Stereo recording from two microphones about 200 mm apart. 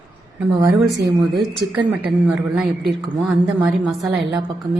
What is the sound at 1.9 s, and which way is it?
A woman's voice, 5° right (ahead or behind).